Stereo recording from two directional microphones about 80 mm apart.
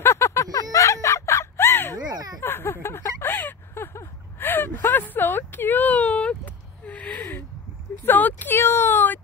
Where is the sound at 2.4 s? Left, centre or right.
Left.